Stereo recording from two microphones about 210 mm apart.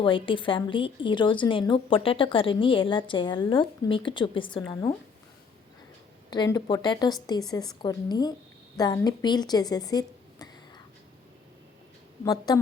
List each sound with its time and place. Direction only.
0.0 s a woman's voice: 25° left (ahead or behind)
6.3 s a woman's voice: 20° left (ahead or behind)
12.2 s a woman's voice: 20° left (ahead or behind)